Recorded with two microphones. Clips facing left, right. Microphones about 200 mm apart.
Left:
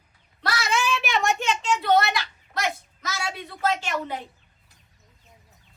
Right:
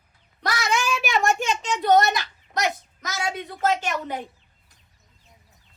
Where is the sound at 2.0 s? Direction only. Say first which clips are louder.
Right 3 dB; 40° right (ahead or behind).